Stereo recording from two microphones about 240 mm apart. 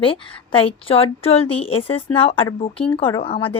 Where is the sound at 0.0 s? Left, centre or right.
Left.